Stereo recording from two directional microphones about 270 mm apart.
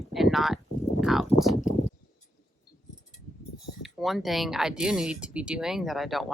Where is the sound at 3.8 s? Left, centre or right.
Centre.